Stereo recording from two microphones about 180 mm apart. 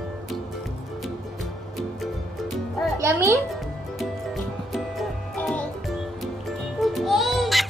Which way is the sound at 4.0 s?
Centre (ahead or behind).